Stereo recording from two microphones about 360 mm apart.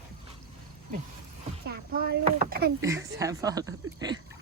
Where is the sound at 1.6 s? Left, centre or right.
Right.